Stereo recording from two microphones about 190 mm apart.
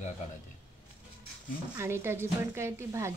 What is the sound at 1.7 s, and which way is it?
Speech, 15° right (ahead or behind).